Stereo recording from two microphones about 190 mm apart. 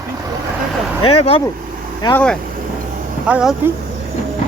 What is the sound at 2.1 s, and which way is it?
Speech, 5° left (ahead or behind).